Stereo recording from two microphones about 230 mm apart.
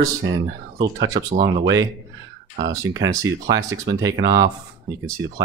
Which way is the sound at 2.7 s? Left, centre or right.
Centre.